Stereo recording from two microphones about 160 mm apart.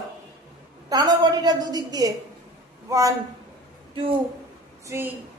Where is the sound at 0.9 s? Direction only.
25° right (ahead or behind).